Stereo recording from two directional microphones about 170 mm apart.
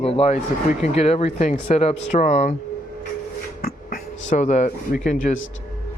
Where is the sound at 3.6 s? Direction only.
50° left (ahead or behind).